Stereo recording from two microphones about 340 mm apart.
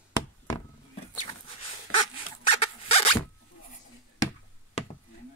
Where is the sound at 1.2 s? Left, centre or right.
Centre.